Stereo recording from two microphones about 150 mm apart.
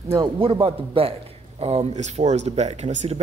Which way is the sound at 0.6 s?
40° right (ahead or behind).